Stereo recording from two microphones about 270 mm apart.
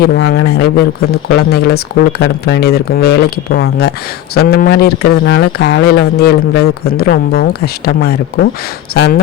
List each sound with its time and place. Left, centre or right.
0.0 s speech: left